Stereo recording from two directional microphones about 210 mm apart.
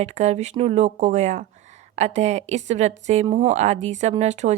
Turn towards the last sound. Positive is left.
turn(degrees=-35)  # may be behind; listen again after turning